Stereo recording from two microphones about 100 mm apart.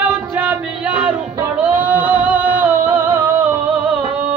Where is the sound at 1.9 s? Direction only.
20° right (ahead or behind).